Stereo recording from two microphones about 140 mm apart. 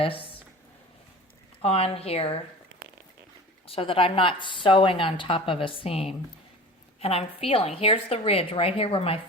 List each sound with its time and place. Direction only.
0.0 s a sound: 40° left (ahead or behind)
1.6 s speech: 45° left (ahead or behind)
3.7 s speech: 40° left (ahead or behind)